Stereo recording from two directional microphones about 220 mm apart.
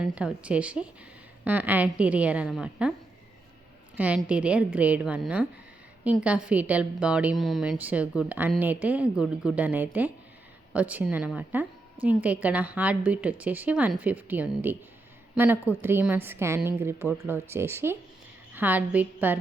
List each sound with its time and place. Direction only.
0.0 s a woman's voice: 5° right (ahead or behind)
3.9 s a woman's voice: 5° right (ahead or behind)